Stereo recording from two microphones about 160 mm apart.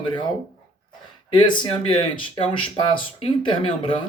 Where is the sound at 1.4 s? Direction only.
35° left (ahead or behind).